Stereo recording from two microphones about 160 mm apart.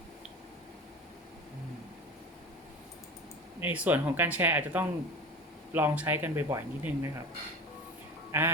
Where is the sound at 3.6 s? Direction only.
10° right (ahead or behind).